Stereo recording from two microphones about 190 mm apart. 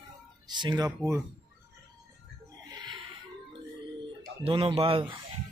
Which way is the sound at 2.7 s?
25° right (ahead or behind).